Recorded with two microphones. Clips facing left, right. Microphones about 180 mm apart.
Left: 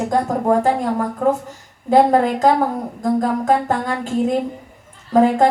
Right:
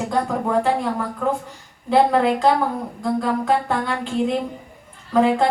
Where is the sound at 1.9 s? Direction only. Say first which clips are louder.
Left 3 dB; 45° left (ahead or behind).